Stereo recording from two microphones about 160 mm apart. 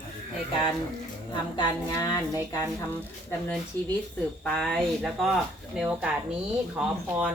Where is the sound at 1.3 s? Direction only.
30° left (ahead or behind).